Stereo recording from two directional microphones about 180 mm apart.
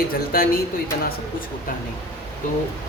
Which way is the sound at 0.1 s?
55° left (ahead or behind).